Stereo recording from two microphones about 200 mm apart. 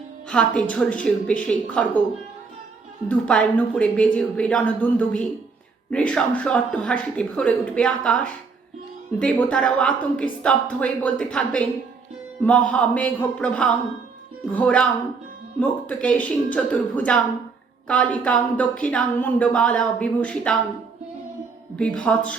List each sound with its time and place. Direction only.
0.3 s a woman's voice: 5° left (ahead or behind)
3.1 s a woman's voice: 5° left (ahead or behind)
18.2 s speech: 5° left (ahead or behind)
21.8 s a woman's voice: 5° left (ahead or behind)